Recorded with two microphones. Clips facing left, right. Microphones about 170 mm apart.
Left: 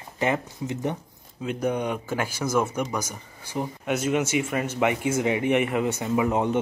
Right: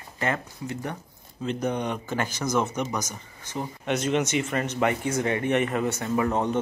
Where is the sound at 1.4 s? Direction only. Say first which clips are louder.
Left 1 dB; 10° left (ahead or behind).